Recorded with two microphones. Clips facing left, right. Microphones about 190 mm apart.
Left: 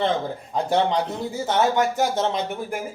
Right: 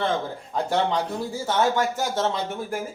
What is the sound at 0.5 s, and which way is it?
Speech, 20° left (ahead or behind).